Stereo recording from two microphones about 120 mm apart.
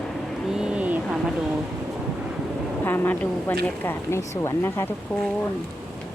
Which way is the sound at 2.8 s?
20° left (ahead or behind).